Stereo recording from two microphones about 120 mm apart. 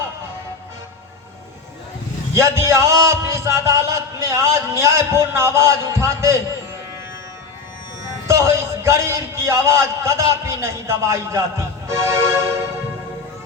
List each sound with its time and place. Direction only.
2.3 s a man's voice: 25° right (ahead or behind)
8.3 s a man's voice: 25° right (ahead or behind)